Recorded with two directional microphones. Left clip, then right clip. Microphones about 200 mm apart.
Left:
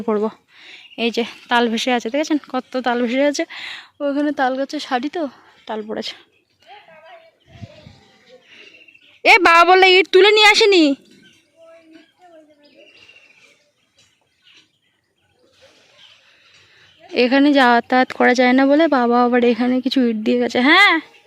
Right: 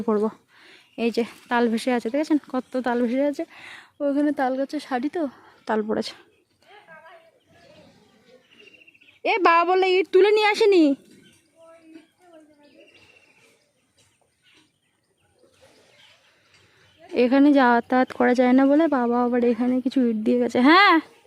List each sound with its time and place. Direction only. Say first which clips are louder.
0.0 s speech: left 3 dB; centre (ahead or behind)
5.6 s speech: right 2 dB; 30° right (ahead or behind)
5.9 s speech: even; 15° right (ahead or behind)
6.7 s a sound: left 7 dB; 10° right (ahead or behind)
9.2 s speech: left 8 dB; 10° left (ahead or behind)
17.0 s speech: left 4 dB; 5° right (ahead or behind)